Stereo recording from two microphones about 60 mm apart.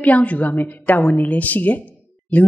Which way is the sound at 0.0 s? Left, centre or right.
Left.